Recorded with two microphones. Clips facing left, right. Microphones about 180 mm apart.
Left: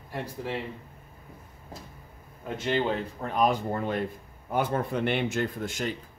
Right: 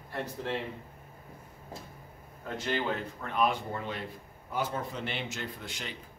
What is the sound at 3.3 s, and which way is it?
Speech, 40° left (ahead or behind).